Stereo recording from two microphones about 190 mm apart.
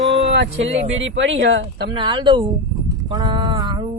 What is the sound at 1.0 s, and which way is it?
Speech, 80° right.